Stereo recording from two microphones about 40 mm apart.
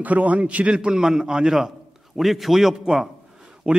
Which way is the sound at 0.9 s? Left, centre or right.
Centre.